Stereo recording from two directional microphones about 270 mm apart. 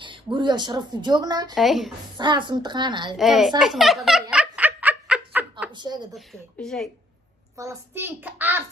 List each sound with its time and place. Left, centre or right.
0.0 s speech: centre
1.5 s a woman's voice: centre
2.1 s speech: centre
3.2 s a woman's voice: centre
3.6 s giggle: centre
5.7 s speech: centre
6.1 s a woman's voice: centre
7.5 s speech: centre